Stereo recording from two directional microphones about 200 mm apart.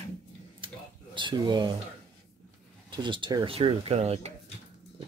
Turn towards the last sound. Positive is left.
turn(degrees=-30)  # may be behind; listen again after turning